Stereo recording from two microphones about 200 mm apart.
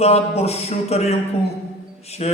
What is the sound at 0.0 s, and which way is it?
A man's voice, 30° left (ahead or behind).